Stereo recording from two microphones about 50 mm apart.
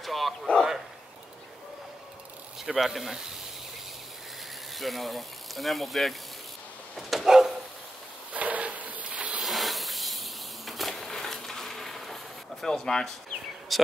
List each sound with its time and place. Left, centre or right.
0.0 s a sound: centre
2.6 s speech: centre
4.7 s speech: centre
7.0 s bow-wow: centre
8.3 s a sound: right
9.4 s insect: centre
12.6 s speech: centre
13.7 s speech: centre